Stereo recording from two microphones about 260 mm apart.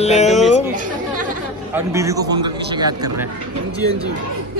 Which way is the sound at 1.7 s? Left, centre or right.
Centre.